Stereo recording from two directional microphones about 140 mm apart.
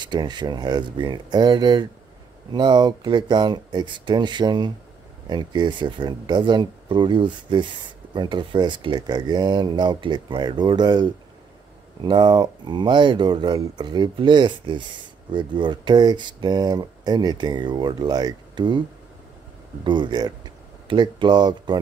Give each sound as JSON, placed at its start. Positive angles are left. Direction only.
{"t": 0.0, "sound": "speech", "side_deg": -30}
{"t": 19.8, "sound": "speech", "side_deg": -35}